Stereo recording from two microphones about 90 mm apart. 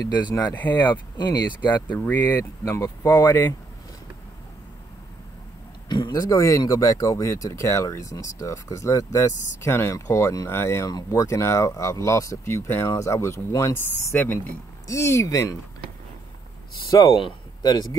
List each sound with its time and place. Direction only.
0.0 s speech: 45° left (ahead or behind)
0.5 s speech: 20° left (ahead or behind)
0.9 s speech: 50° left (ahead or behind)
1.9 s speech: 20° left (ahead or behind)
2.6 s speech: 35° left (ahead or behind)
5.9 s speech: 55° left (ahead or behind); by 14.4 s 25° left (ahead or behind)
14.9 s speech: 35° left (ahead or behind)
16.9 s speech: 45° left (ahead or behind)